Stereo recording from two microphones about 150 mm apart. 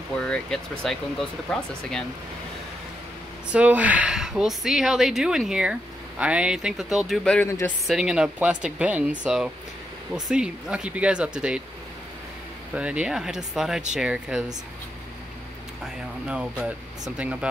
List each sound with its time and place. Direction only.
0.2 s speech: 5° left (ahead or behind)
3.5 s speech: 10° right (ahead or behind)
7.4 s speech: 20° left (ahead or behind)
7.8 s speech: centre (ahead or behind)
12.7 s speech: 5° right (ahead or behind)
16.3 s speech: 5° right (ahead or behind)